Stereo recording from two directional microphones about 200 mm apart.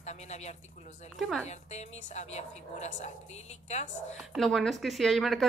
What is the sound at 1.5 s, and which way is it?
A woman's voice, 35° left (ahead or behind).